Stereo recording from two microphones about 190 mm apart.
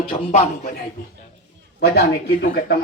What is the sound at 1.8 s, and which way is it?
Speech, 55° left (ahead or behind).